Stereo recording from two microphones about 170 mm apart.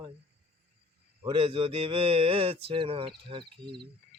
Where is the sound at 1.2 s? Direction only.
30° right (ahead or behind).